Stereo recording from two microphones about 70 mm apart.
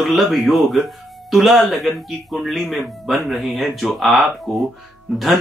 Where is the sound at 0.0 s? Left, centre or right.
Centre.